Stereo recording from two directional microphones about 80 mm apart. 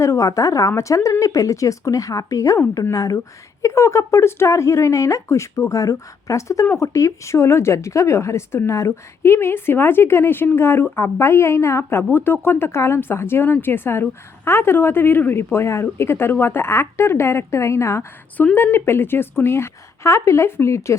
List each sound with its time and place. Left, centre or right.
0.0 s speech: left